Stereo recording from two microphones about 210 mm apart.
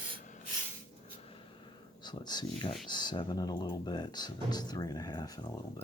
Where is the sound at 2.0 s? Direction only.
20° left (ahead or behind).